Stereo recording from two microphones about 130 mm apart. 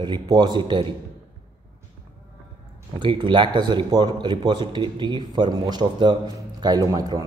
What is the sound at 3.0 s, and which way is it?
Speech, 40° right (ahead or behind).